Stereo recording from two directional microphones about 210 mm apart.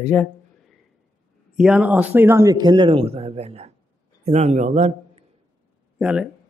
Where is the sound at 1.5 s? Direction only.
5° right (ahead or behind); by 5.2 s 35° right (ahead or behind).